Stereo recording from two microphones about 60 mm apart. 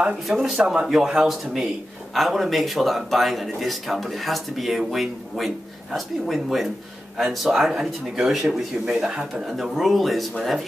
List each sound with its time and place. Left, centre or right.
0.6 s speech: centre
8.8 s speech: centre
9.3 s speech: centre